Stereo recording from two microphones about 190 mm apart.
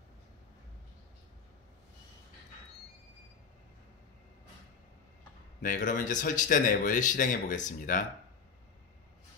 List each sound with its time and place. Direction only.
5.6 s speech: 45° left (ahead or behind)